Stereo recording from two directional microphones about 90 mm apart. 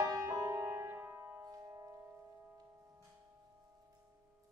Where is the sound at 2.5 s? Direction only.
35° right (ahead or behind).